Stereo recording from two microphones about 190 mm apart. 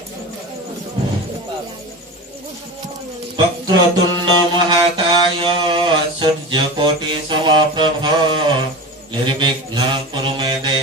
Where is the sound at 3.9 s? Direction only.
25° right (ahead or behind).